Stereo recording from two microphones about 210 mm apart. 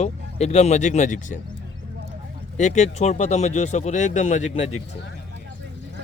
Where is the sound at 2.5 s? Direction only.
35° left (ahead or behind).